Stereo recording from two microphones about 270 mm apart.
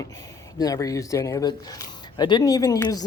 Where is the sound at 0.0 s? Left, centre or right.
Centre.